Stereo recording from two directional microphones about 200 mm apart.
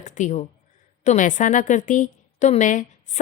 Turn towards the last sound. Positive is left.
turn(degrees=40)  # may be behind; listen again after turning